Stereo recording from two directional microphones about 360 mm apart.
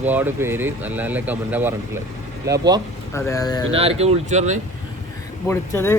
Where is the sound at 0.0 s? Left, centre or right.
Centre.